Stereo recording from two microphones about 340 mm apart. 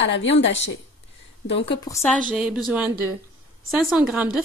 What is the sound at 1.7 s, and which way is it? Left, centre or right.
A woman's voice, centre.